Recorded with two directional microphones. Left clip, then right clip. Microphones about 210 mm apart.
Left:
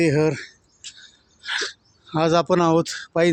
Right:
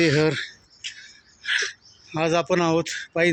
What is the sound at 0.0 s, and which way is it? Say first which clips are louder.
Speech: even; 10° left (ahead or behind).